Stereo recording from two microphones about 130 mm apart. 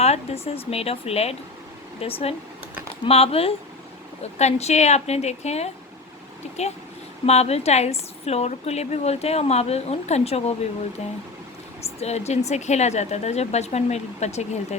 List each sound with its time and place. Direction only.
0.0 s a woman's voice: 55° left (ahead or behind)
7.3 s a woman's voice: 55° left (ahead or behind)
11.8 s a woman's voice: 55° left (ahead or behind)